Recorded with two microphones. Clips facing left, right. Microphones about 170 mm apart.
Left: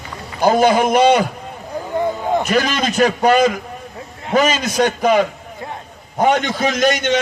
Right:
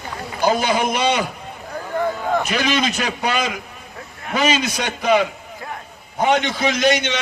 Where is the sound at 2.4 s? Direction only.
45° left (ahead or behind).